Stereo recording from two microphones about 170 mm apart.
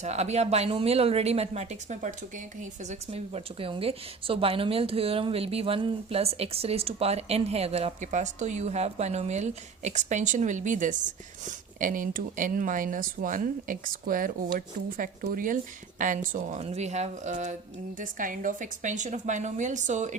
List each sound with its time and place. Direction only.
0.0 s a woman's voice: 40° right (ahead or behind)